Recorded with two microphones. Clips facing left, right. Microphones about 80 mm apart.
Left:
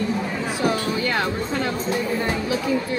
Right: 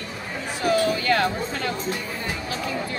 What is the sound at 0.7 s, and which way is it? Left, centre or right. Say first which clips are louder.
Music: right 4 dB; left.